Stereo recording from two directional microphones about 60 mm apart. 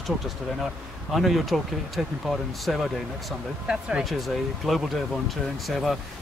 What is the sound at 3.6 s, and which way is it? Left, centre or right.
Speech, centre.